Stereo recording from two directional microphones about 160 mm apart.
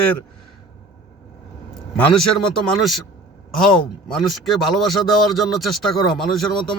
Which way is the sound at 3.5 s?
5° left (ahead or behind).